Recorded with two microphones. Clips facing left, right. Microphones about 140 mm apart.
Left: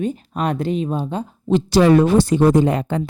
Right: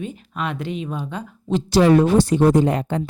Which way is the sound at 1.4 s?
65° left (ahead or behind).